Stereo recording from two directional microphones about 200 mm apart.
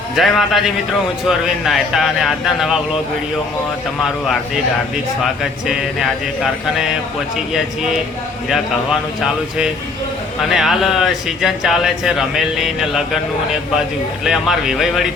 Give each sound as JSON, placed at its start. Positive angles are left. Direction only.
{"t": 0.2, "sound": "speech", "side_deg": 0}
{"t": 5.4, "sound": "speech", "side_deg": 0}
{"t": 8.4, "sound": "speech", "side_deg": 0}
{"t": 14.3, "sound": "speech", "side_deg": 0}